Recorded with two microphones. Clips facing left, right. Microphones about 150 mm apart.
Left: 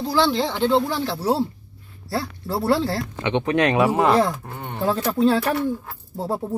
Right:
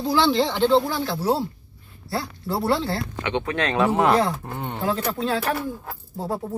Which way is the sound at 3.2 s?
25° left (ahead or behind).